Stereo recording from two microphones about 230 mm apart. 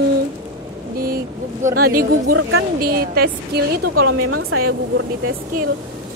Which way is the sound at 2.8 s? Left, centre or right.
Right.